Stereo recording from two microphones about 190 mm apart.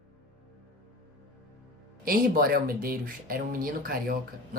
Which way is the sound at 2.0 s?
50° right (ahead or behind).